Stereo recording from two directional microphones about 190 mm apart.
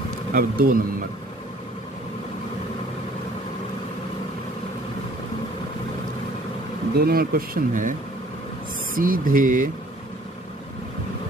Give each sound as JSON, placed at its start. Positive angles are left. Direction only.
{"t": 0.3, "sound": "speech", "side_deg": -50}
{"t": 7.0, "sound": "speech", "side_deg": -50}
{"t": 8.9, "sound": "speech", "side_deg": -45}